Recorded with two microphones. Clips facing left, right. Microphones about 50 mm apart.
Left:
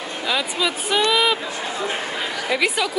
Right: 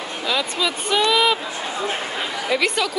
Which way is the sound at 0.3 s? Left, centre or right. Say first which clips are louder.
Even; centre.